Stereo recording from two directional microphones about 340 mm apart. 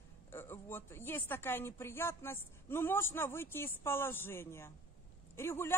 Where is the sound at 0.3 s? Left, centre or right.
Centre.